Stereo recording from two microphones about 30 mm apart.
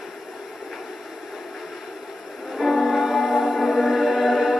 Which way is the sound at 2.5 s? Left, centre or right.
Centre.